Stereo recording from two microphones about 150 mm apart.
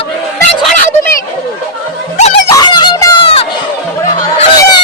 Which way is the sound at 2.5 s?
25° left (ahead or behind).